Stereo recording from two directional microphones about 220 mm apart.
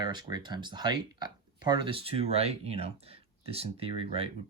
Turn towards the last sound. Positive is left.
turn(degrees=-25)  # may be behind; listen again after turning